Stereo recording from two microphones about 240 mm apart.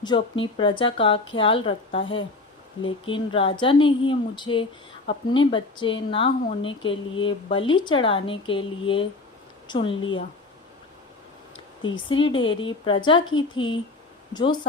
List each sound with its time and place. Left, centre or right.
0.0 s speech: centre
11.9 s speech: centre